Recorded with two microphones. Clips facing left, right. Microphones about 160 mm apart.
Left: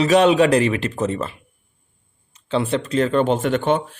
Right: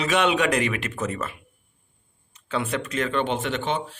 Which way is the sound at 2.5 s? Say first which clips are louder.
Left 6 dB; 30° left (ahead or behind).